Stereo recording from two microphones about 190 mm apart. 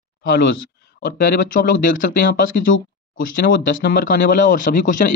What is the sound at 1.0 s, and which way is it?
Speech, 45° left (ahead or behind).